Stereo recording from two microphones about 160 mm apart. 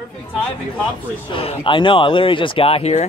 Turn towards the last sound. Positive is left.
turn(degrees=45)  # may be behind; listen again after turning